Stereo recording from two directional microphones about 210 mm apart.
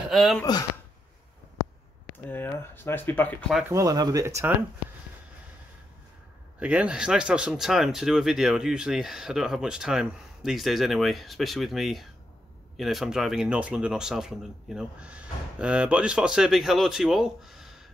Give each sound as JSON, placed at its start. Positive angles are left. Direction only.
{"t": 0.1, "sound": "speech", "side_deg": 0}
{"t": 0.4, "sound": "speech", "side_deg": 15}
{"t": 2.2, "sound": "speech", "side_deg": 10}
{"t": 3.6, "sound": "speech", "side_deg": -15}
{"t": 6.6, "sound": "speech", "side_deg": -5}